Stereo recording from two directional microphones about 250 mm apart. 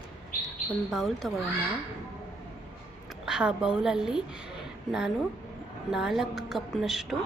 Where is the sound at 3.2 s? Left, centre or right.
Centre.